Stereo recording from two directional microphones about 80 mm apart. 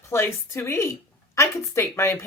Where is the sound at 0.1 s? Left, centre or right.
Left.